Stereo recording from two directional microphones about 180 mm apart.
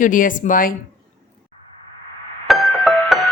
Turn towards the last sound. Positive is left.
turn(degrees=0)  # may be behind; listen again after turning